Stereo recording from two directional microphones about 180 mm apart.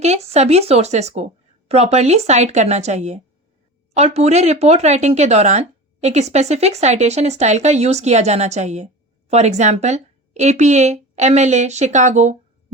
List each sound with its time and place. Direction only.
0.0 s speech: 35° right (ahead or behind)